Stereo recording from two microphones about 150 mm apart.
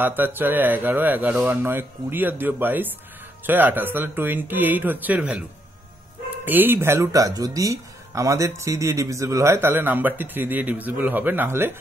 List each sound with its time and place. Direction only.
0.0 s speech: 15° right (ahead or behind)
6.4 s speech: 15° right (ahead or behind)